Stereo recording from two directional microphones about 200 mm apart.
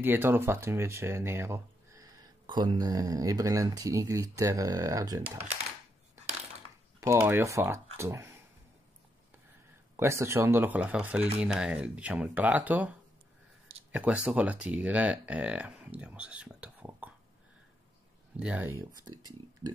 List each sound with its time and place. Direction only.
0.0 s speech: 10° right (ahead or behind)
7.0 s speech: 15° right (ahead or behind)
9.9 s speech: 15° right (ahead or behind)
13.9 s speech: 5° right (ahead or behind)
18.3 s speech: 5° right (ahead or behind)